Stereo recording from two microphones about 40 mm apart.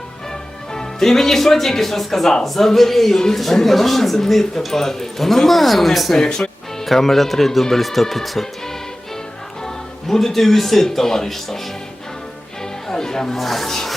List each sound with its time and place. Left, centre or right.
0.7 s speech: centre
6.1 s speech: centre
10.1 s speech: centre
12.9 s music: centre
13.3 s speech: centre